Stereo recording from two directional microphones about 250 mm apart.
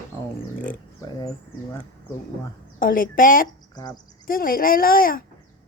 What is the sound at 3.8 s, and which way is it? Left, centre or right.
Speech, centre.